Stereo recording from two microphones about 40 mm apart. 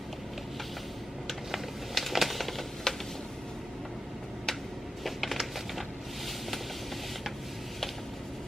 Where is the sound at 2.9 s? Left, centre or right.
Centre.